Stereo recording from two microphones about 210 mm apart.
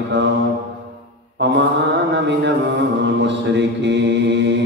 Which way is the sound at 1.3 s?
55° right (ahead or behind).